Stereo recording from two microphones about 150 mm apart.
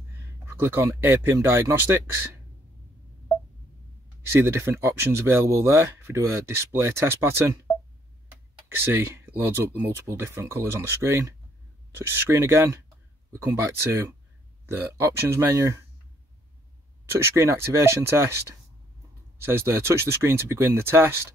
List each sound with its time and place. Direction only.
0.1 s speech: 15° right (ahead or behind)
4.3 s speech: 15° right (ahead or behind)
8.6 s speech: 15° right (ahead or behind)
17.1 s speech: 20° right (ahead or behind)
19.4 s speech: 15° right (ahead or behind)